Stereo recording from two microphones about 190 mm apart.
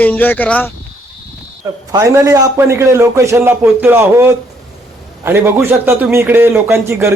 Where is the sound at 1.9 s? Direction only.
15° right (ahead or behind).